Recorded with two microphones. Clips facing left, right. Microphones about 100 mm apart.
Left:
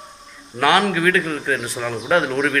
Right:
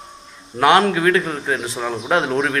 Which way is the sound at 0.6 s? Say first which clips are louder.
Right 3 dB; 25° right (ahead or behind).